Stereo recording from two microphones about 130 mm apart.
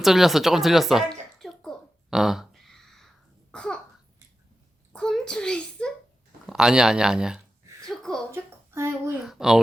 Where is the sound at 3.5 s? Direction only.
5° left (ahead or behind).